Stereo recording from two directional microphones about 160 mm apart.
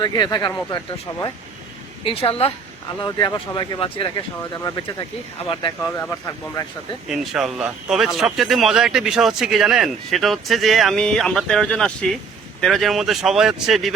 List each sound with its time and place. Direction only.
0.0 s speech: 25° left (ahead or behind)
2.0 s speech: 35° left (ahead or behind)
6.0 s speech: 15° left (ahead or behind)
7.1 s speech: centre (ahead or behind)